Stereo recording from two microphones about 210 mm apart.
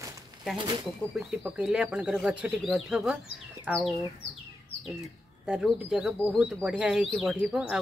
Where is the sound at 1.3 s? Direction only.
5° right (ahead or behind).